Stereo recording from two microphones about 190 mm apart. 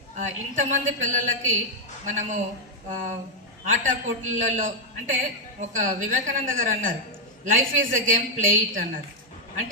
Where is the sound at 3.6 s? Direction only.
45° right (ahead or behind).